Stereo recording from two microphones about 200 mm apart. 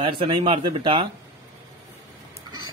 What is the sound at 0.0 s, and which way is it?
A man's voice, 25° right (ahead or behind).